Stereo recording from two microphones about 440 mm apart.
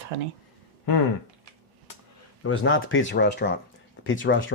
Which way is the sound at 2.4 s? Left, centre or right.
Left.